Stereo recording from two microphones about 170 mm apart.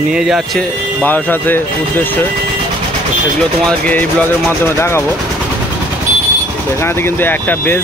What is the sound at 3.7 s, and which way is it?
Speech, 10° left (ahead or behind).